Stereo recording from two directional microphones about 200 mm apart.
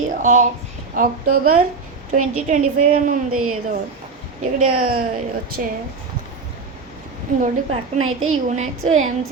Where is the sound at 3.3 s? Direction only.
90° right.